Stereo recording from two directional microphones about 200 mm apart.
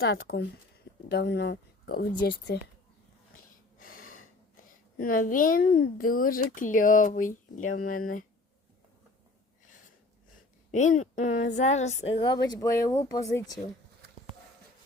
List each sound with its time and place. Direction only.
0.2 s speech: 50° left (ahead or behind)
3.8 s gasp: 45° left (ahead or behind)
4.9 s speech: 45° left (ahead or behind)
10.7 s a woman's voice: 40° left (ahead or behind); by 13.4 s 15° left (ahead or behind)